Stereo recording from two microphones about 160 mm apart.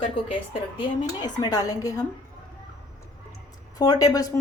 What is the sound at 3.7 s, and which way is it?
Speech, 25° left (ahead or behind).